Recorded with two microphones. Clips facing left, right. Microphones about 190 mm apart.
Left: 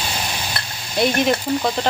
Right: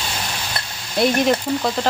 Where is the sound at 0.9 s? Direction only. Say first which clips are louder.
Right 1 dB; centre (ahead or behind).